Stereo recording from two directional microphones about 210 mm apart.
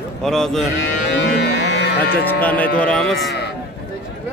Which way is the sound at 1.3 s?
55° left (ahead or behind).